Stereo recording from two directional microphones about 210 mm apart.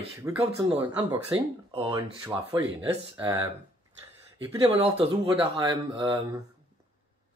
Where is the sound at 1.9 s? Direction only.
15° right (ahead or behind).